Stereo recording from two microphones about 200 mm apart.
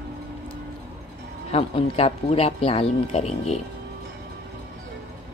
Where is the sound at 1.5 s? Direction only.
30° left (ahead or behind).